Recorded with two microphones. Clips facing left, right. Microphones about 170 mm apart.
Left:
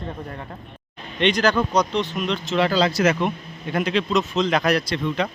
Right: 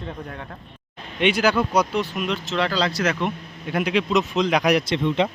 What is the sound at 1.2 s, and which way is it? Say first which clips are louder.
A man's voice: even; 10° right (ahead or behind).